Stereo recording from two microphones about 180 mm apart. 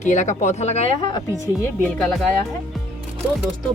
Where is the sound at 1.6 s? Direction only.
5° left (ahead or behind).